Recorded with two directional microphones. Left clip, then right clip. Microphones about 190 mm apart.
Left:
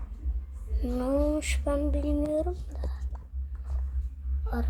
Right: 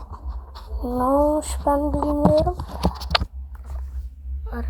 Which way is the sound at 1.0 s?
30° left (ahead or behind).